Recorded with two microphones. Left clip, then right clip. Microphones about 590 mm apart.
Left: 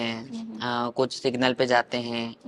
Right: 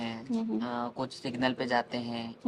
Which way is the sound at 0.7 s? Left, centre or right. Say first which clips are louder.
Left 9 dB; left.